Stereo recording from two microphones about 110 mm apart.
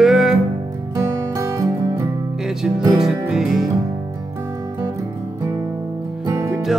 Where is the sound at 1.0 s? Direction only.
25° right (ahead or behind).